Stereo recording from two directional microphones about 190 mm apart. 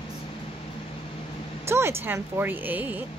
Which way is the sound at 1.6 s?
15° right (ahead or behind).